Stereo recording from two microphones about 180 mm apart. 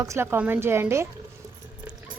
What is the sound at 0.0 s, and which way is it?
A woman's voice, 15° right (ahead or behind).